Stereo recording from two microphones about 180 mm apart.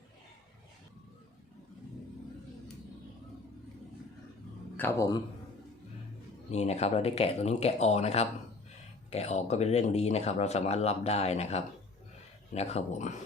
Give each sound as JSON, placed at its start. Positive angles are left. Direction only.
{"t": 4.8, "sound": "speech", "side_deg": 15}
{"t": 6.5, "sound": "speech", "side_deg": 35}